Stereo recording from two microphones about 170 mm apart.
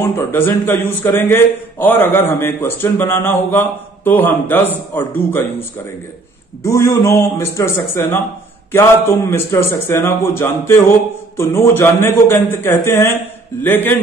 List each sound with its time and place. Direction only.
0.0 s a man's voice: 15° left (ahead or behind)